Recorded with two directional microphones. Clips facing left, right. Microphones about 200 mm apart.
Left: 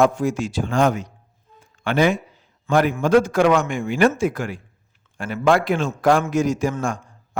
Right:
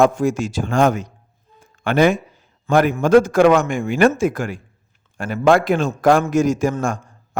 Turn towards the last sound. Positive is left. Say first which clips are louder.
# right 3 dB
turn(degrees=-45)  # may be behind; listen again after turning